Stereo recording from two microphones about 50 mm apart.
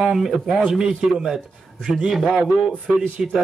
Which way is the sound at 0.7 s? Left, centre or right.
Centre.